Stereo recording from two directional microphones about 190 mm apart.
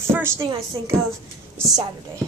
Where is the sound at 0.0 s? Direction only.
15° right (ahead or behind).